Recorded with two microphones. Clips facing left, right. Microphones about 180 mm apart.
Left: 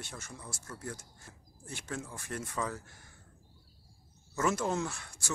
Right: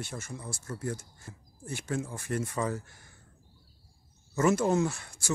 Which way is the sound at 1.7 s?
10° right (ahead or behind).